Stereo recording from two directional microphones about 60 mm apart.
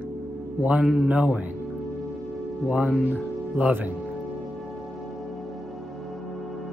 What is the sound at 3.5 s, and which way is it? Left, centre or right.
Speech, right.